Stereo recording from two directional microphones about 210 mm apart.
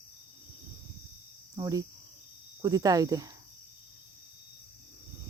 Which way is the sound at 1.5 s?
15° right (ahead or behind).